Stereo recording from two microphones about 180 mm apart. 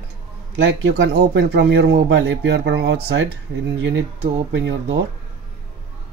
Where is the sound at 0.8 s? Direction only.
75° right (ahead or behind).